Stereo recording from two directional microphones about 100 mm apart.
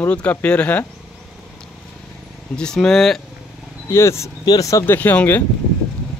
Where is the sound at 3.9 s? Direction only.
25° left (ahead or behind).